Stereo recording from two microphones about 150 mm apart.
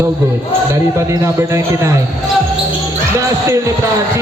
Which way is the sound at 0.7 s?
20° right (ahead or behind).